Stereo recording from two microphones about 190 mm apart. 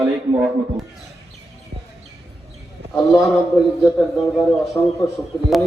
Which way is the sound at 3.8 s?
15° left (ahead or behind).